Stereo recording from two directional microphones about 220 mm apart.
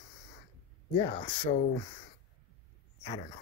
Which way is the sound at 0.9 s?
25° left (ahead or behind).